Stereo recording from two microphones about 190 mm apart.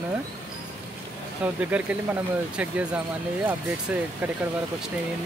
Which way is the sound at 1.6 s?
10° right (ahead or behind).